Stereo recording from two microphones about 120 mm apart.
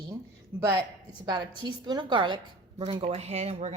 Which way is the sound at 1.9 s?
40° right (ahead or behind).